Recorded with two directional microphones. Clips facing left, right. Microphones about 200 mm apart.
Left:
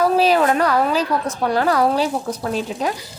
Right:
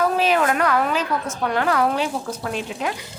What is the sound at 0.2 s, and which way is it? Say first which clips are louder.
Speech: left 3 dB; 35° left (ahead or behind).